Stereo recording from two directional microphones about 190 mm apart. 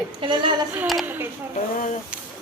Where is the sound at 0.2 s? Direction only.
25° right (ahead or behind).